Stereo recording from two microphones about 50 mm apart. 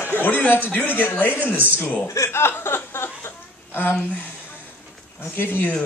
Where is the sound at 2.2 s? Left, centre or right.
Left.